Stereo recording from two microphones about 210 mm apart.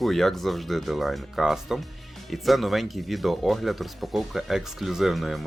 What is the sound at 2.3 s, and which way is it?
Speech, centre (ahead or behind).